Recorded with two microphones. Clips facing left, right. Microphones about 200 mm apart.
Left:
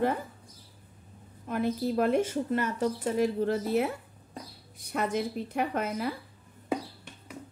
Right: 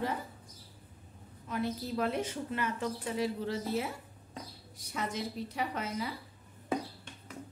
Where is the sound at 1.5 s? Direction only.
50° left (ahead or behind).